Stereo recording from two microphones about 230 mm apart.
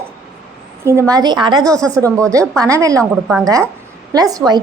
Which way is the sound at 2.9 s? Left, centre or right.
Centre.